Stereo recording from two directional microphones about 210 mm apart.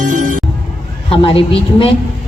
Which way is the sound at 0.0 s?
35° right (ahead or behind).